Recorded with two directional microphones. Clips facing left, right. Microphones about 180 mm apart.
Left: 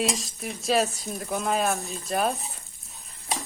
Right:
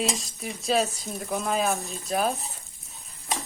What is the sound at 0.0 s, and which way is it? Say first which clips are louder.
Speech: left 1 dB; centre (ahead or behind).